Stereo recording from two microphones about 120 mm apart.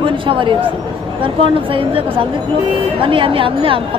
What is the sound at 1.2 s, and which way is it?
Music, 45° right (ahead or behind).